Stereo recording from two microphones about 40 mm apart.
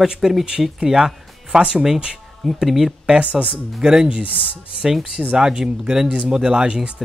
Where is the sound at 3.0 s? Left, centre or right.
Right.